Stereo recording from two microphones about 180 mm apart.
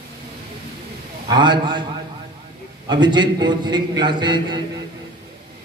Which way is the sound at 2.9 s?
25° right (ahead or behind).